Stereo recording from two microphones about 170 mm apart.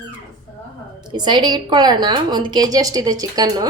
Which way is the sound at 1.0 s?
25° right (ahead or behind).